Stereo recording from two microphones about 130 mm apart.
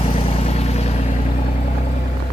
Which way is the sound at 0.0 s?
55° left (ahead or behind).